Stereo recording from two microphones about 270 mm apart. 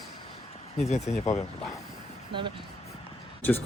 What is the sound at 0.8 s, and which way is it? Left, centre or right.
Speech, left.